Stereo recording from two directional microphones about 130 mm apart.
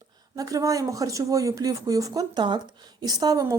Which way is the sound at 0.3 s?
25° right (ahead or behind).